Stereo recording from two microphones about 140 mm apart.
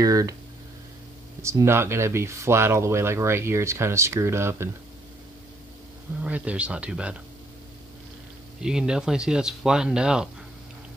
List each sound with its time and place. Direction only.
0.0 s speech: 25° right (ahead or behind)
1.4 s speech: 20° right (ahead or behind)
6.2 s speech: 10° right (ahead or behind)
8.6 s speech: 5° right (ahead or behind)